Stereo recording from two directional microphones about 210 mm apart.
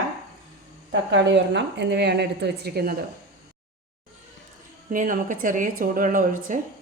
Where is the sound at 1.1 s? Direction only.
55° right (ahead or behind).